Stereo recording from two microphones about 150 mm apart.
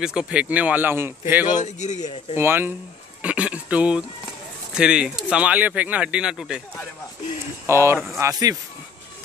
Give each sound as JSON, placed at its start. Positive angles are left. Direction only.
{"t": 0.0, "sound": "speech", "side_deg": -5}
{"t": 1.6, "sound": "a man's voice", "side_deg": 50}
{"t": 2.3, "sound": "speech", "side_deg": -15}
{"t": 7.6, "sound": "speech", "side_deg": -15}